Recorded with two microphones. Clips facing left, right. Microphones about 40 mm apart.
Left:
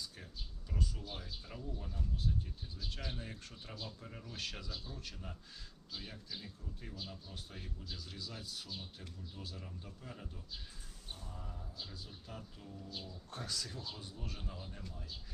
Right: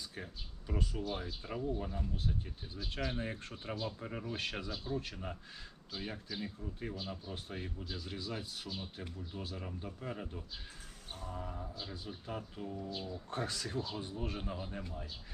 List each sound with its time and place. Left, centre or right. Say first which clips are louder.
0.7 s speech: right 6 dB; right